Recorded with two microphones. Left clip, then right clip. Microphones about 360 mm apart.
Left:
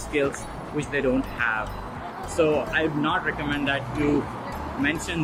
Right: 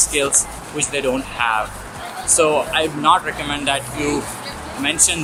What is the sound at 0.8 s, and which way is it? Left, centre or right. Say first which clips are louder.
Speech: right 4 dB; centre.